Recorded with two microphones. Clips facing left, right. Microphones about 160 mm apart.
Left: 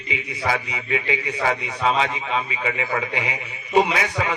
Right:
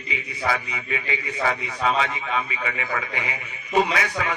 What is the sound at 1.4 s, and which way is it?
A man's voice, 30° left (ahead or behind).